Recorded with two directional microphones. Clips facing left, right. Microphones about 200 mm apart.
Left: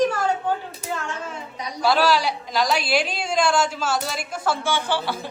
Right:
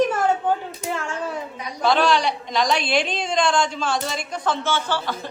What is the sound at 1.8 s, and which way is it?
A woman's voice, 5° left (ahead or behind).